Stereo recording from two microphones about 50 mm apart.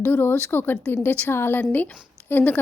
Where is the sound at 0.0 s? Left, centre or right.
Left.